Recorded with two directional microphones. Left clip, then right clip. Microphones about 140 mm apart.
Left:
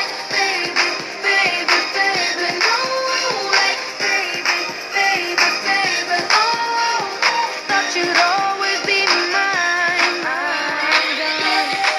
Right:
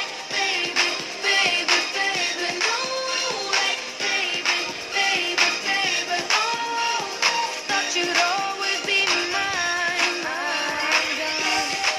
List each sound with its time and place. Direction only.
0.7 s music: 20° left (ahead or behind)
2.0 s music: centre (ahead or behind)
4.0 s music: 25° left (ahead or behind)
6.3 s music: 5° left (ahead or behind)
7.2 s music: 25° left (ahead or behind)
8.6 s music: 5° left (ahead or behind)
9.5 s music: 25° left (ahead or behind)